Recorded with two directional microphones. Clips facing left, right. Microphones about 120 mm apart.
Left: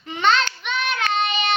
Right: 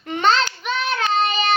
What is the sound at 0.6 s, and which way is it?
Child singing, 35° right (ahead or behind).